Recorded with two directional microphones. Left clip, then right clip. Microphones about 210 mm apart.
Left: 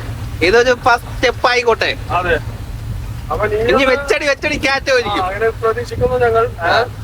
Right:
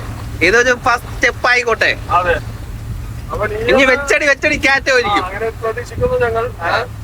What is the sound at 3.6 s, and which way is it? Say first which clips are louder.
Speech: right 3 dB; 10° left (ahead or behind).